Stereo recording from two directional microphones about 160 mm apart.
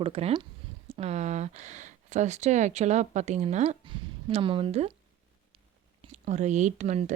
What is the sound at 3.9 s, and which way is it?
A woman's voice, 35° right (ahead or behind).